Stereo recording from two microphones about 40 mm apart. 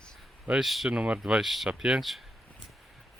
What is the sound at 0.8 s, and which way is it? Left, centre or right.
Speech, right.